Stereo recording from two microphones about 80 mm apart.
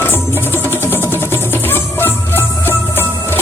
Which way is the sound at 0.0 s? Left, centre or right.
Left.